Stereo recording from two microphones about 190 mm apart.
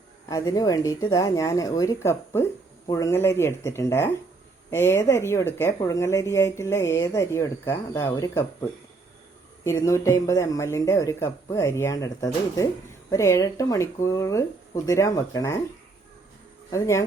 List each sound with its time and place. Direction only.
0.3 s speech: 20° left (ahead or behind)
9.6 s speech: 15° left (ahead or behind)
16.7 s speech: 15° left (ahead or behind)